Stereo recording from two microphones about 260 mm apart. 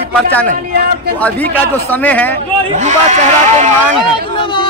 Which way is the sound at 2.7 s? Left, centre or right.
Right.